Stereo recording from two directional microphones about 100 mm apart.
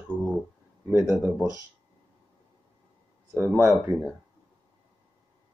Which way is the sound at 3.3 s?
25° right (ahead or behind).